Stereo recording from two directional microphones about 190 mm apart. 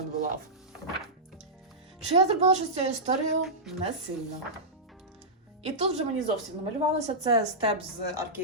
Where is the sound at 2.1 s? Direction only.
35° right (ahead or behind).